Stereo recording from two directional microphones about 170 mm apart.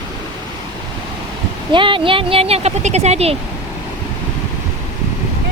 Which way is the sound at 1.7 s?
30° right (ahead or behind).